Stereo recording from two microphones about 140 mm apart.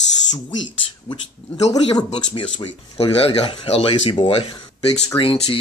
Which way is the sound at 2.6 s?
45° left (ahead or behind).